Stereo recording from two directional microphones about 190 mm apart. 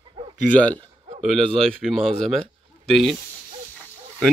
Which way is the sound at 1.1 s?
40° right (ahead or behind).